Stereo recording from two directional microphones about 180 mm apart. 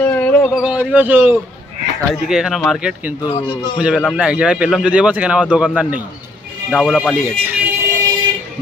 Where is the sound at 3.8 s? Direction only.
Centre (ahead or behind).